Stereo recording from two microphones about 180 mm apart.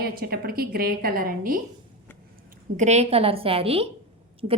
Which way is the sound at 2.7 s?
40° right (ahead or behind).